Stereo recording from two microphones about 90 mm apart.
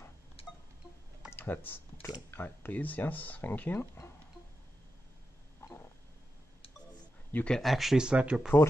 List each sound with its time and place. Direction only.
1.3 s a sound: 20° left (ahead or behind)
2.3 s speech: 25° left (ahead or behind)
7.3 s speech: 10° left (ahead or behind)
7.6 s speech: centre (ahead or behind)